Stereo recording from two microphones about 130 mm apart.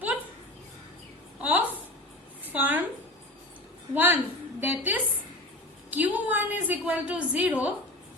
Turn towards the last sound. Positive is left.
turn(degrees=-10)  # may be behind; listen again after turning